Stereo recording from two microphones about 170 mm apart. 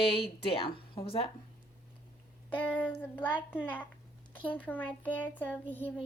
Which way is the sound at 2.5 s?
10° left (ahead or behind).